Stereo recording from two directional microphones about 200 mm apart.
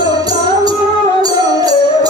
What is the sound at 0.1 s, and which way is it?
Music, 20° right (ahead or behind).